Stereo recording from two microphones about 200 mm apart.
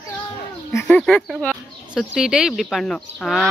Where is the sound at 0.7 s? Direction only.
5° left (ahead or behind).